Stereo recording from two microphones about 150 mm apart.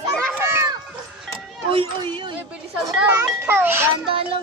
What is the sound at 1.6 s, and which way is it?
Speech, 35° right (ahead or behind).